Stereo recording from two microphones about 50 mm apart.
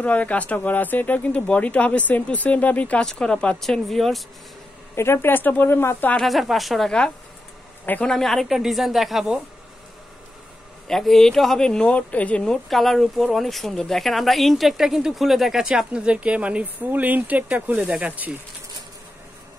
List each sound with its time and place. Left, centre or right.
0.0 s speech: left
3.1 s speech: centre
3.6 s speech: centre
4.9 s a woman's voice: left
5.7 s speech: left
6.2 s speech: centre
8.0 s speech: centre
8.5 s speech: centre
10.9 s speech: centre
11.9 s speech: left
12.6 s speech: centre; by 18.4 s right